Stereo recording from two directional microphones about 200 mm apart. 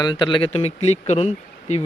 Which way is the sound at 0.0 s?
20° left (ahead or behind).